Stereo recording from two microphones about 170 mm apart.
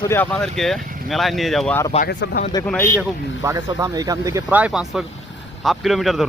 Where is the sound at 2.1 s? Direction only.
80° left.